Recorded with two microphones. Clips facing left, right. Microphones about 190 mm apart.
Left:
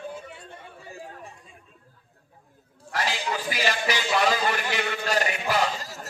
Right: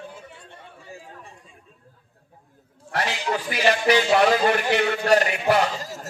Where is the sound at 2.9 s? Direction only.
60° right (ahead or behind).